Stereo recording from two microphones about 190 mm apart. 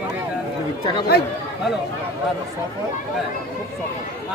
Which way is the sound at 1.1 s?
55° left (ahead or behind).